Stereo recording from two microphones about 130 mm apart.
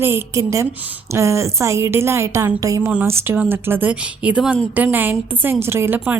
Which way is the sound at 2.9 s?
10° right (ahead or behind).